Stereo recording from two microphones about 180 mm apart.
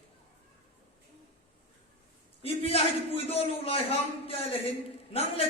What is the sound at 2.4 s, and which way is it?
A man's voice, 35° left (ahead or behind).